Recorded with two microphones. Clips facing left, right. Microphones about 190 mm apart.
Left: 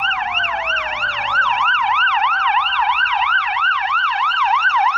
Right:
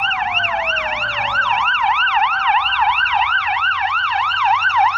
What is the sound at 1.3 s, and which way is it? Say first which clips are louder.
Emergency vehicle: left 2 dB; 30° right (ahead or behind).